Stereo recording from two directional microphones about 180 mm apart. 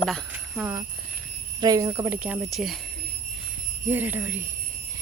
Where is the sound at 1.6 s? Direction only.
20° right (ahead or behind); by 2.8 s centre (ahead or behind).